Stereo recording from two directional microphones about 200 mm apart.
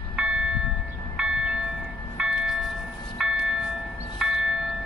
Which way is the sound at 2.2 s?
5° right (ahead or behind).